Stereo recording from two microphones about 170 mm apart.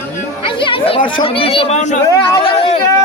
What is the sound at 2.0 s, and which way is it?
Speech, 20° left (ahead or behind).